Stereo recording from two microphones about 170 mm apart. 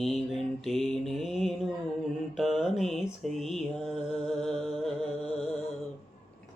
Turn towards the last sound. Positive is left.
turn(degrees=35)  # may be behind; listen again after turning